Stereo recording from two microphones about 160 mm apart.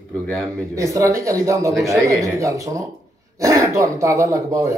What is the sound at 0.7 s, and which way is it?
Speech, 20° right (ahead or behind).